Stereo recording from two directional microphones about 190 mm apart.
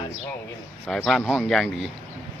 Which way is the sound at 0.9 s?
Centre (ahead or behind).